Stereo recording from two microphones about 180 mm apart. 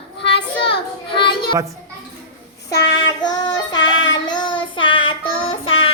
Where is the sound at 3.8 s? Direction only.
90° left.